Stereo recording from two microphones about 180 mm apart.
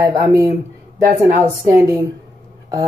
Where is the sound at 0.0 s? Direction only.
15° right (ahead or behind).